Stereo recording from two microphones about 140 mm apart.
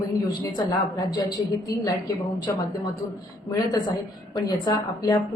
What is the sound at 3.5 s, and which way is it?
A woman's voice, 30° left (ahead or behind).